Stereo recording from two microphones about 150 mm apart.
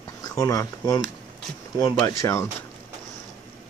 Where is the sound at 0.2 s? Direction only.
20° left (ahead or behind).